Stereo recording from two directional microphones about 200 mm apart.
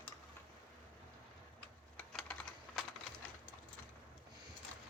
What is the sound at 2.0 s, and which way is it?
Typing, 5° left (ahead or behind).